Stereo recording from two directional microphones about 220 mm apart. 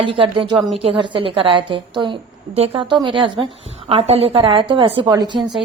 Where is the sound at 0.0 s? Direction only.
25° right (ahead or behind).